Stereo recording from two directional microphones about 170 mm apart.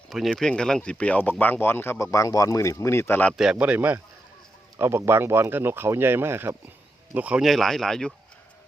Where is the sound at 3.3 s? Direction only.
5° right (ahead or behind).